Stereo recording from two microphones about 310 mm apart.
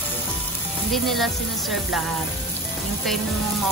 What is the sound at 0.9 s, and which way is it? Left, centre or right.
Speech, centre.